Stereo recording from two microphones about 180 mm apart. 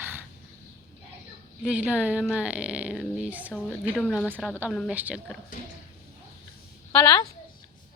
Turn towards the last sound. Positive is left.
turn(degrees=20)  # may be behind; listen again after turning